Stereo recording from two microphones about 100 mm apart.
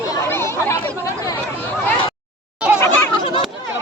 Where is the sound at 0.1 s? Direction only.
25° left (ahead or behind).